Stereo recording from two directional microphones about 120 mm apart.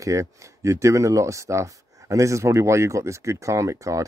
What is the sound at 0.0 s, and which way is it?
Speech, 25° right (ahead or behind).